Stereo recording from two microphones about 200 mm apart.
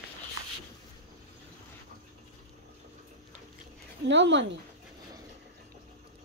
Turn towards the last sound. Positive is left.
turn(degrees=-65)  # may be behind; listen again after turning